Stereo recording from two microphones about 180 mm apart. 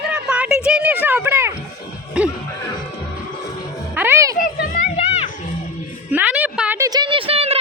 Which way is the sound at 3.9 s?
10° right (ahead or behind).